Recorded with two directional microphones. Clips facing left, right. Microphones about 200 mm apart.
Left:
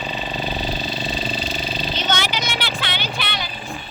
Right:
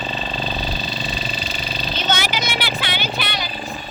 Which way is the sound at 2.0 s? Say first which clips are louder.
Right 2 dB; 10° right (ahead or behind).